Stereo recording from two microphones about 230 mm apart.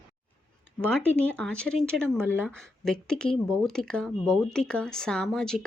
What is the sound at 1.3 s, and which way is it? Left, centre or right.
Speech, centre.